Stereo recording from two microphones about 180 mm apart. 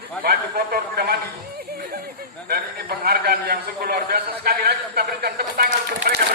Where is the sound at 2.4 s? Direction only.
60° right (ahead or behind).